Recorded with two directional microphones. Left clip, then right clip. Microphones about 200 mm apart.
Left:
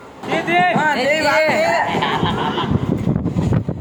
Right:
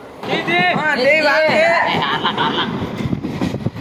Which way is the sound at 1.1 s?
5° left (ahead or behind).